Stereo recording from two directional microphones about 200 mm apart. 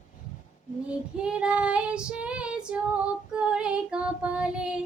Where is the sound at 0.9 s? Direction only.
5° right (ahead or behind).